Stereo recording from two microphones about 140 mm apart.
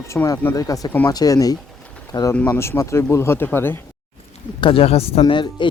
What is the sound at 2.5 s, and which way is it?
Speech, 20° left (ahead or behind).